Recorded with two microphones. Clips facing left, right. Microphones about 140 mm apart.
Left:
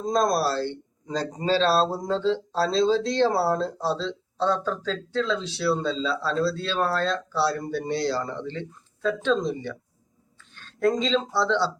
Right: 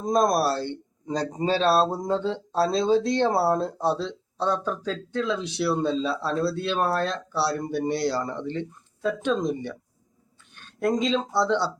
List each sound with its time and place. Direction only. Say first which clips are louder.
0.0 s speech: right 1 dB; 20° right (ahead or behind)
10.5 s a sound: left 1 dB; 15° right (ahead or behind)
11.3 s speech: right 2 dB; 15° right (ahead or behind)